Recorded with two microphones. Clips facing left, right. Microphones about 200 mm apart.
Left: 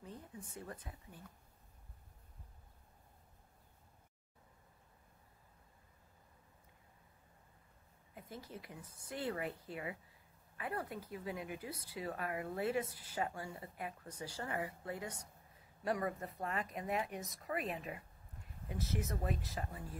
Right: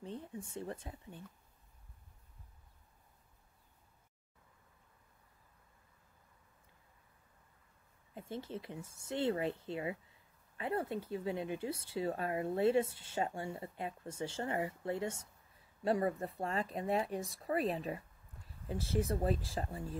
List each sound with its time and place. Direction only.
0.0 s speech: 30° right (ahead or behind)
8.1 s speech: 25° right (ahead or behind)